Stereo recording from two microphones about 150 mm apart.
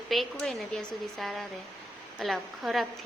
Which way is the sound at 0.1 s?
Centre (ahead or behind).